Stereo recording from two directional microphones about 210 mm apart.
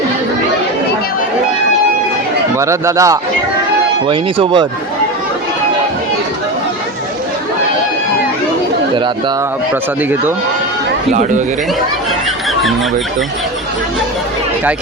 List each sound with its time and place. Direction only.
2.6 s a man's voice: 15° right (ahead or behind)